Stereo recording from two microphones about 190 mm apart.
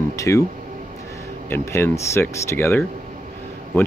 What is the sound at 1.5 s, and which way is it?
Speech, 15° left (ahead or behind).